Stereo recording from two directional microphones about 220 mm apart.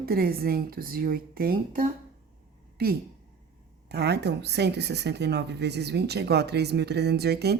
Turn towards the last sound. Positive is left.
turn(degrees=-50)  # may be behind; listen again after turning